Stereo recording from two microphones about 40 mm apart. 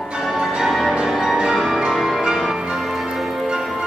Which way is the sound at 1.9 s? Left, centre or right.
Centre.